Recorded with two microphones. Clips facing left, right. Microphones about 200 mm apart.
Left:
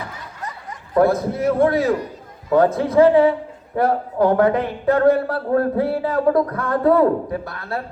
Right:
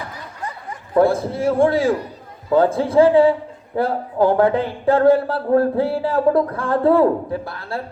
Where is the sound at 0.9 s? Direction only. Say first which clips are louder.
Even; 30° right (ahead or behind).